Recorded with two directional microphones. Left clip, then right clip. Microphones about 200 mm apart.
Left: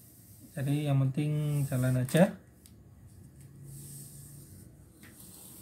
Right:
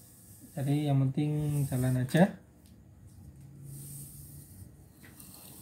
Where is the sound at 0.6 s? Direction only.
20° left (ahead or behind).